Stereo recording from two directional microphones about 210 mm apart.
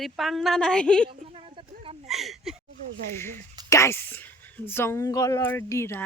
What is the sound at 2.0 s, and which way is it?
Speech, centre (ahead or behind).